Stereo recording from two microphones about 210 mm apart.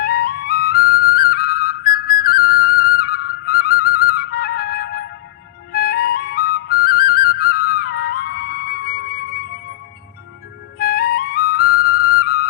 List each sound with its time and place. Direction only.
0.0 s flute: 45° left (ahead or behind)
5.7 s music: 45° left (ahead or behind)
10.8 s music: 45° left (ahead or behind)